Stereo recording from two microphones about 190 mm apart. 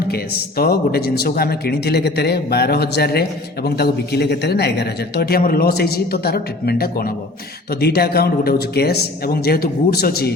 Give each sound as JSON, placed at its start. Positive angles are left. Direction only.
{"t": 0.1, "sound": "a man's voice", "side_deg": 55}